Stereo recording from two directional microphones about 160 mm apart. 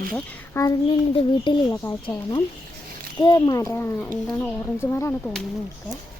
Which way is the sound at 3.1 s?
30° left (ahead or behind).